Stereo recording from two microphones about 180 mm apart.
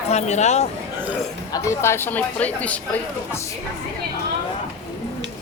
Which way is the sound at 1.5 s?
15° left (ahead or behind).